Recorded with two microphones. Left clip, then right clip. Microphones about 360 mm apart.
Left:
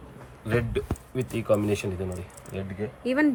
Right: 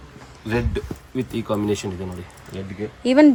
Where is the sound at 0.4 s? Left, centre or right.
Centre.